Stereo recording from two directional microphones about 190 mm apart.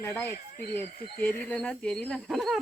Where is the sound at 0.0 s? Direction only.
10° left (ahead or behind).